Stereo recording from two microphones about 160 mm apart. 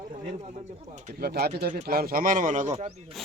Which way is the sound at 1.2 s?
80° right.